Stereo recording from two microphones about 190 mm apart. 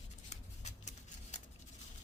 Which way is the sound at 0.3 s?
40° left (ahead or behind).